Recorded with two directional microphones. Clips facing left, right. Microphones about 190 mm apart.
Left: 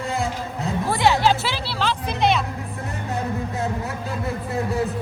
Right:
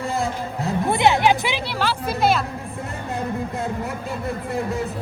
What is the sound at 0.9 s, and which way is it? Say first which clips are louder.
Speech: right 1 dB; 20° right (ahead or behind).